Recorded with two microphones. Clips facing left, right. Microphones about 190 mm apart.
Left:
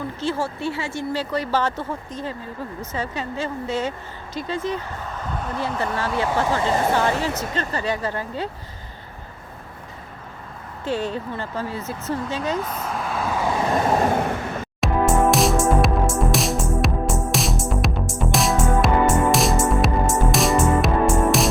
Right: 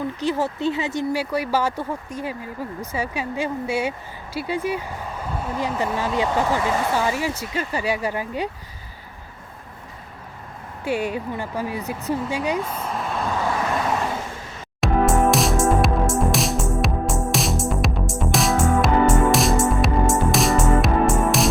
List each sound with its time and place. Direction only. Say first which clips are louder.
0.2 s speech: right 1 dB; 15° right (ahead or behind)
10.8 s speech: right 1 dB; 10° right (ahead or behind)
12.8 s vehicle: even; centre (ahead or behind)
14.1 s vehicle: left 8 dB; 65° left (ahead or behind)
14.8 s music: right 1 dB; centre (ahead or behind)